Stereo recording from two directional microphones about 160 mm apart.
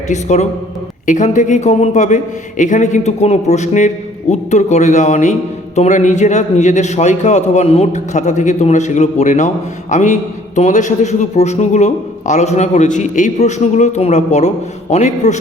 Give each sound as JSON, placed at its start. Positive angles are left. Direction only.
{"t": 0.1, "sound": "a man's voice", "side_deg": 50}